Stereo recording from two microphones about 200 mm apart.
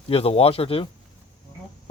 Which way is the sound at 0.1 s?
30° left (ahead or behind).